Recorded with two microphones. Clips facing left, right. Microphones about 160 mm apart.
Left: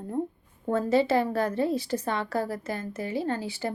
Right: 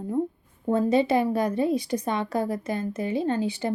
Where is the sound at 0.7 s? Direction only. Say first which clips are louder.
Right 2 dB; 15° right (ahead or behind).